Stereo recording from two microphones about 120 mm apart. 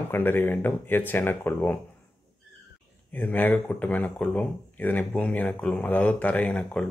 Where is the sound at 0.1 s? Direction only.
20° left (ahead or behind).